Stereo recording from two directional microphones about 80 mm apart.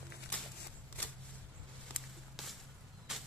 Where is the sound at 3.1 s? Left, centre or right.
Centre.